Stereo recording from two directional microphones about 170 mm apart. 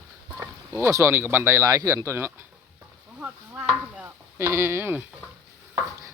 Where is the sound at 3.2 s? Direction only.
5° right (ahead or behind).